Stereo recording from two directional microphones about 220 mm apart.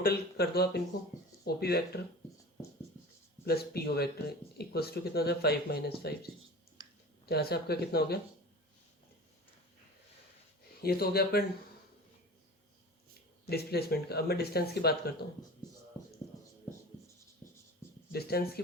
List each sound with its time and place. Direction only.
0.0 s speech: 45° left (ahead or behind)
3.4 s speech: 45° left (ahead or behind)
6.8 s clicking: 20° right (ahead or behind)
7.3 s speech: 45° left (ahead or behind)
10.8 s speech: 45° left (ahead or behind)
13.5 s speech: 45° left (ahead or behind)
18.1 s speech: 45° left (ahead or behind)